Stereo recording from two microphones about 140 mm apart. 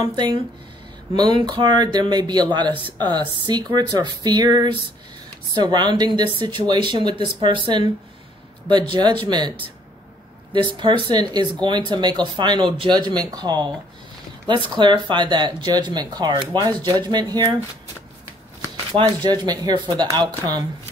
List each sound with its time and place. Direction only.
0.1 s speech: 35° right (ahead or behind)
1.4 s speech: 35° right (ahead or behind)
19.2 s speech: 30° right (ahead or behind)